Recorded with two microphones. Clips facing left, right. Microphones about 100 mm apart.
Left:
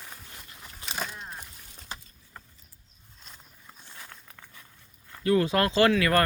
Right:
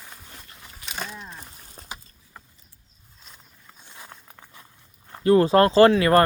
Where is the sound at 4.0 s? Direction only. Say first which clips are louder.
Right 4 dB; 25° right (ahead or behind).